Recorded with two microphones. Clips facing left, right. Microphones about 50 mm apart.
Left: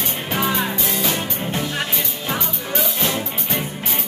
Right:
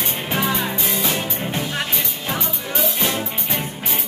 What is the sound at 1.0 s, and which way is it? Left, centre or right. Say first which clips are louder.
Music: even; centre.